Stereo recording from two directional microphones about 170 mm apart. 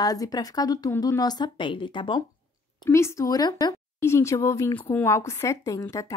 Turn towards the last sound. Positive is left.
turn(degrees=20)  # may be behind; listen again after turning